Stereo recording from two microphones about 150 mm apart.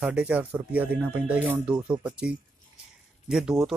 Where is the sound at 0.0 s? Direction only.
10° right (ahead or behind).